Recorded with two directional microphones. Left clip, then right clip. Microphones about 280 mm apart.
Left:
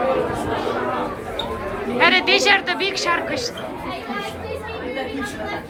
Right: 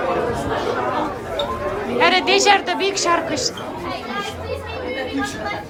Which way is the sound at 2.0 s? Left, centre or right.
Centre.